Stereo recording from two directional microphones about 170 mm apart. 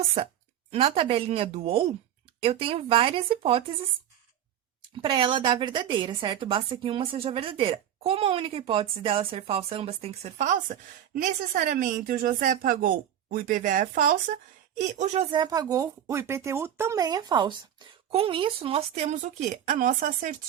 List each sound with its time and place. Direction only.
0.7 s a woman's voice: 35° right (ahead or behind)
5.0 s a woman's voice: 30° right (ahead or behind); by 14.3 s 55° right (ahead or behind)
14.8 s a woman's voice: 45° right (ahead or behind)